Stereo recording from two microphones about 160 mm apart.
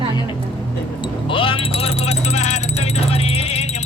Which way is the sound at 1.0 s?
35° left (ahead or behind).